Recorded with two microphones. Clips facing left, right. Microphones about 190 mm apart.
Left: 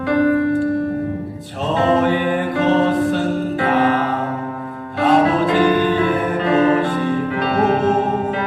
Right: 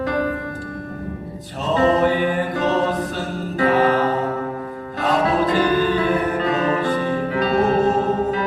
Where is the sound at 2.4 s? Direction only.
40° right (ahead or behind).